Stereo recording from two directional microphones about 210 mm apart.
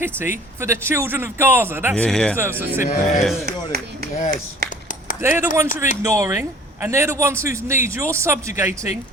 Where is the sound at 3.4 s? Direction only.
50° right (ahead or behind).